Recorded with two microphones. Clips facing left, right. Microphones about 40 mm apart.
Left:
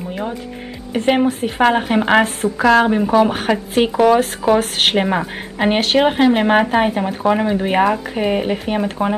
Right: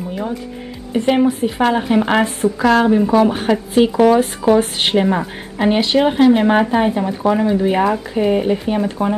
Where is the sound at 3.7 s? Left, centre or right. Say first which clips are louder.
Right 1 dB; left.